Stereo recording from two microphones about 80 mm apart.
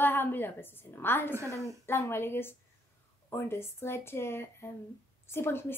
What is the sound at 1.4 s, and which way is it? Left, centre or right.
Speech, right.